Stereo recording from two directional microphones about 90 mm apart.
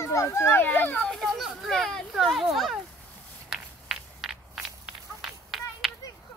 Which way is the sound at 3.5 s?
5° right (ahead or behind).